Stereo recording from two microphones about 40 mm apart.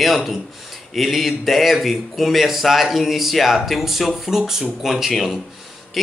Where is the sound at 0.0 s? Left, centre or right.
Centre.